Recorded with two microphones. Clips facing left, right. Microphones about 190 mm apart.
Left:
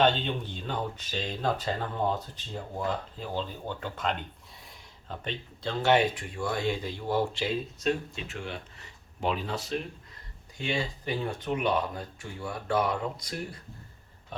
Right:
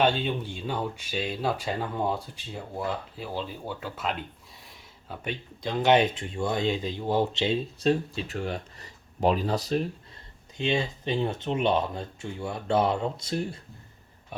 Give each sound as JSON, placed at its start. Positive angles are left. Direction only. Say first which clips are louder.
{"t": 0.0, "sound": "speech", "louder": "right 1 dB", "side_deg": -10}
{"t": 10.6, "sound": "speech", "louder": "right 4 dB", "side_deg": -25}